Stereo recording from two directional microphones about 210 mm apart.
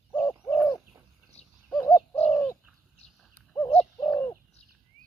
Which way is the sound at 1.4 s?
5° left (ahead or behind).